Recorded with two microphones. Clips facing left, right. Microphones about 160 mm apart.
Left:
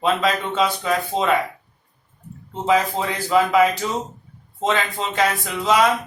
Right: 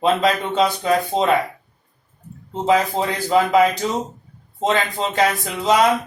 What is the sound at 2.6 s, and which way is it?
Mantra, 35° right (ahead or behind).